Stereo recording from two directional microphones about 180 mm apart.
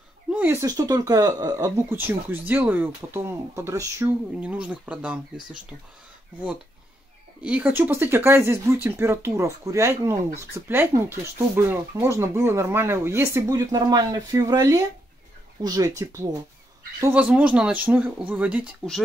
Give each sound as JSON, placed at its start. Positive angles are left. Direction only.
{"t": 0.3, "sound": "speech", "side_deg": -10}
{"t": 7.4, "sound": "speech", "side_deg": -10}